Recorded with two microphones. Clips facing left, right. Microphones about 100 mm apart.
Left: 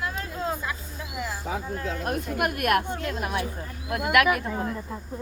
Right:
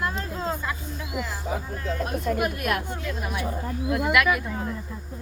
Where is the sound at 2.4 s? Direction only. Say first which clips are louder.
Left 2 dB; 60° left (ahead or behind).